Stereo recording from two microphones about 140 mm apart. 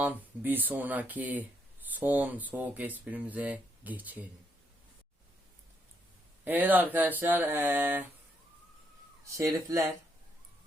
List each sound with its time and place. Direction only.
0.0 s speech: 10° right (ahead or behind)
6.4 s speech: 10° right (ahead or behind)
9.2 s speech: 20° right (ahead or behind)